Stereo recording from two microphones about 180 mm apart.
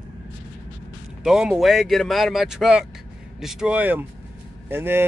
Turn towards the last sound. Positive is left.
turn(degrees=-10)  # may be behind; listen again after turning